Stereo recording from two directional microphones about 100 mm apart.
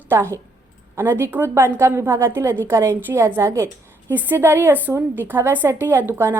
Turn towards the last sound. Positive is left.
turn(degrees=-20)  # may be behind; listen again after turning